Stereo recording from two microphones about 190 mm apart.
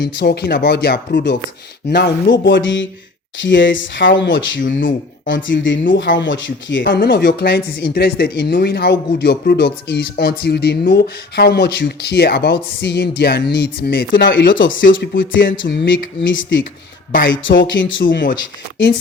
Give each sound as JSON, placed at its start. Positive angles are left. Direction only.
{"t": 0.0, "sound": "speech", "side_deg": 60}
{"t": 2.4, "sound": "speech", "side_deg": 80}
{"t": 4.6, "sound": "speech", "side_deg": 45}
{"t": 5.3, "sound": "speech", "side_deg": 75}
{"t": 14.8, "sound": "speech", "side_deg": 45}
{"t": 15.2, "sound": "speech", "side_deg": 80}
{"t": 15.6, "sound": "speech", "side_deg": 65}